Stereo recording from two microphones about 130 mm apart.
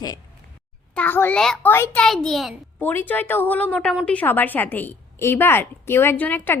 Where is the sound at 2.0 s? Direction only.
5° left (ahead or behind).